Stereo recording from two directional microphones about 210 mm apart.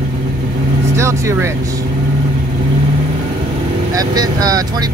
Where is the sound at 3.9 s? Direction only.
15° right (ahead or behind).